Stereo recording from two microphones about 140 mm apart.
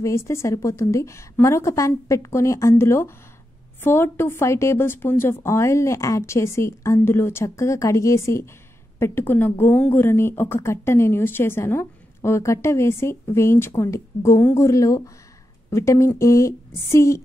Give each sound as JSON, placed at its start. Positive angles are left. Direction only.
{"t": 0.0, "sound": "a woman's voice", "side_deg": 20}